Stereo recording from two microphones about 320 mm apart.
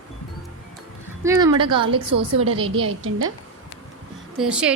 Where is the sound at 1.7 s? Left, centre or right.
Centre.